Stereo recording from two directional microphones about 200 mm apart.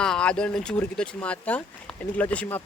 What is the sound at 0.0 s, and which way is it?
Speech, 5° left (ahead or behind).